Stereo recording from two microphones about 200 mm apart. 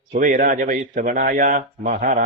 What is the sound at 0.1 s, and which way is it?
A man's voice, 40° right (ahead or behind).